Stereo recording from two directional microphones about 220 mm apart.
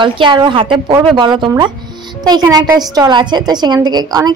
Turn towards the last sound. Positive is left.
turn(degrees=-20)  # may be behind; listen again after turning